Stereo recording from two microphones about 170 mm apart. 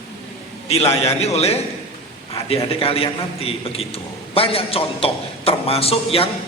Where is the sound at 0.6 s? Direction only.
35° left (ahead or behind).